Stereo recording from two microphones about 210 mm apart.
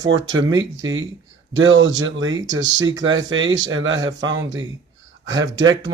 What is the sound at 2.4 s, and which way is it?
Speech, 15° right (ahead or behind).